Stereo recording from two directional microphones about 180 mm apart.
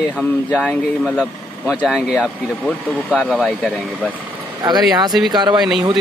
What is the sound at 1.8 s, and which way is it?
Speech, centre (ahead or behind).